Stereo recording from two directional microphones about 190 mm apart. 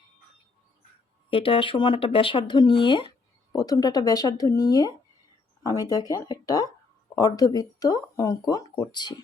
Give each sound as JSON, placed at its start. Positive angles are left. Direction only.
{"t": 1.3, "sound": "speech", "side_deg": 30}